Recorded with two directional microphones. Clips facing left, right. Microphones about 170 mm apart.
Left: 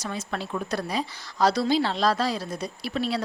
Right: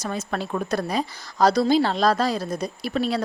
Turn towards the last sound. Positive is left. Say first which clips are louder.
# right 3 dB
turn(degrees=-45)  # may be behind; listen again after turning